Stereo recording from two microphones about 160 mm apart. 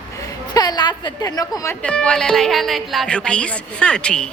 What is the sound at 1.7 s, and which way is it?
Speech, 5° left (ahead or behind).